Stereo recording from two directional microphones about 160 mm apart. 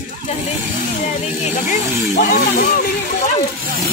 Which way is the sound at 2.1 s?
55° left (ahead or behind).